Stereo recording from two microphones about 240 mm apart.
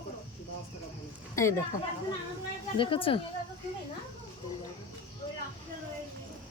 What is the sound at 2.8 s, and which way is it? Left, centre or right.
Speech, left.